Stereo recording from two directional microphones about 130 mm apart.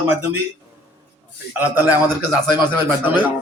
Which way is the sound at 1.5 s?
15° right (ahead or behind).